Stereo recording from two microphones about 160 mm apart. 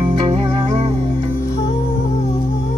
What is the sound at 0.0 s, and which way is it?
Music, 35° right (ahead or behind).